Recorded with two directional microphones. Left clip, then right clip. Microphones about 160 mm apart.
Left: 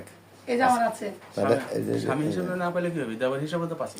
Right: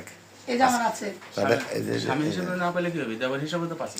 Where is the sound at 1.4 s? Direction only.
30° left (ahead or behind); by 3.3 s 45° left (ahead or behind).